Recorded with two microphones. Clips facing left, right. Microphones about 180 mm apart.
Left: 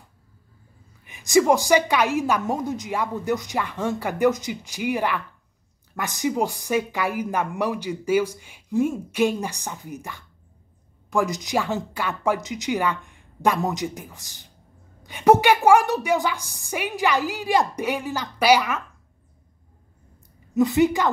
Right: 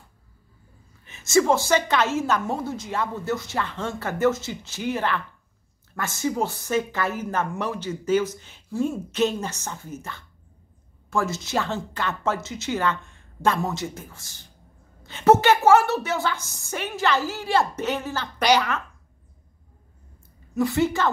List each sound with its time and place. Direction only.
1.0 s a woman's voice: 15° left (ahead or behind)
20.5 s a woman's voice: 20° left (ahead or behind)